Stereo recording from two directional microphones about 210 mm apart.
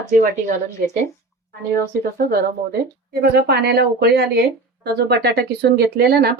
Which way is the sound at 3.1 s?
50° right (ahead or behind).